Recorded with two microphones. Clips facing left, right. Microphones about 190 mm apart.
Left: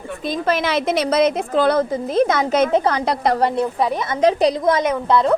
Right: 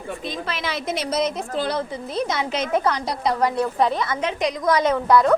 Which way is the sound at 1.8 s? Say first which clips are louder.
Left 8 dB; 45° left (ahead or behind).